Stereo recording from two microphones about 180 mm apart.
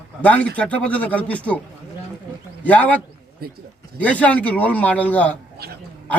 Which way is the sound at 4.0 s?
5° left (ahead or behind).